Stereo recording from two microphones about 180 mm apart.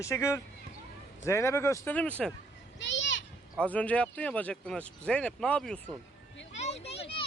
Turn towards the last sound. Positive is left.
turn(degrees=35)  # may be behind; listen again after turning